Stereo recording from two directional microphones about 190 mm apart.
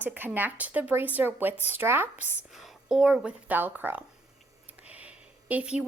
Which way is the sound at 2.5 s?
Centre (ahead or behind).